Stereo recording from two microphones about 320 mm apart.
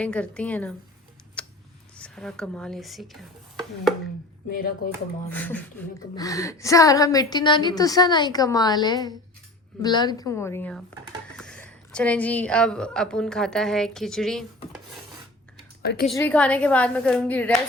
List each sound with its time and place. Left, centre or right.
0.0 s a woman's voice: centre
1.4 s a sound: centre
2.0 s speech: centre
4.4 s speech: left
5.3 s a woman's voice: centre
15.8 s a woman's voice: left
16.0 s a woman's voice: centre